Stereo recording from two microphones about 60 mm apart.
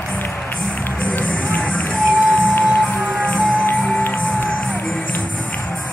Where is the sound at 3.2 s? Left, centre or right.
Left.